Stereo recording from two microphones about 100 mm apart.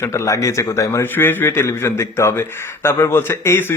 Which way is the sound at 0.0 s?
30° left (ahead or behind).